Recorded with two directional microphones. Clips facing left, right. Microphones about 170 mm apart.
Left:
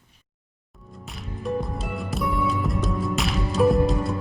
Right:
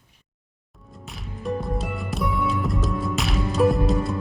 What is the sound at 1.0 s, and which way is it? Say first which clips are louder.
Music: even; centre (ahead or behind).